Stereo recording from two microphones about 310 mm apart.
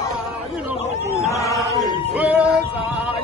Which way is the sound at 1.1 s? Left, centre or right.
Centre.